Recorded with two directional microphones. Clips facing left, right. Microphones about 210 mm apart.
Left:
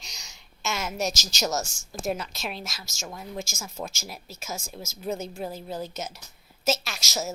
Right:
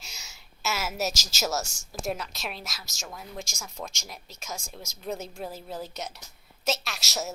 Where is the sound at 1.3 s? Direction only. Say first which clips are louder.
Left 2 dB; 5° right (ahead or behind).